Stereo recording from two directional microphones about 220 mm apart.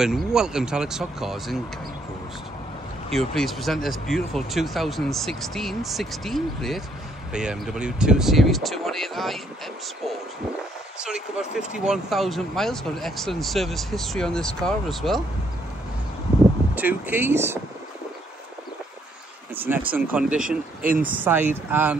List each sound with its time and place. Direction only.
0.0 s speech: centre (ahead or behind)
3.1 s speech: centre (ahead or behind)
11.0 s speech: 5° right (ahead or behind)
16.7 s speech: 10° right (ahead or behind)
19.5 s speech: 10° right (ahead or behind)
20.4 s speech: 40° right (ahead or behind)
21.0 s speech: 10° right (ahead or behind)